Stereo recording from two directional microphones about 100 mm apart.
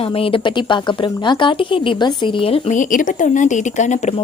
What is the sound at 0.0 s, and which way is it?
Speech, 70° left (ahead or behind).